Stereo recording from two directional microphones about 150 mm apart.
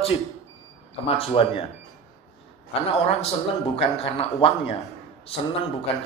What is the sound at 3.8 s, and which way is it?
Speech, 40° left (ahead or behind).